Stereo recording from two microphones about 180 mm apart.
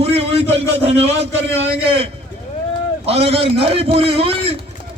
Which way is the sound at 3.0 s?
35° right (ahead or behind).